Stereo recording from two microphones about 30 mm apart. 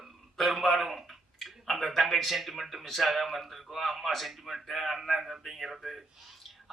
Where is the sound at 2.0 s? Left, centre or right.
Centre.